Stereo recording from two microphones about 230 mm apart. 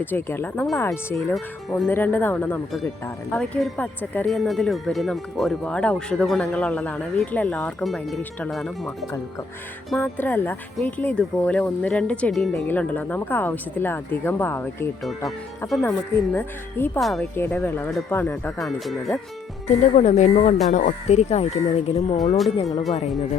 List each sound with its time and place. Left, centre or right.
0.0 s speech: centre
19.6 s speech: left